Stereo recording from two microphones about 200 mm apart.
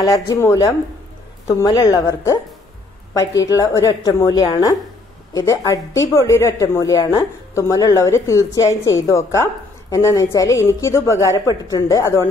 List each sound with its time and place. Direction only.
0.0 s a woman's voice: 15° left (ahead or behind)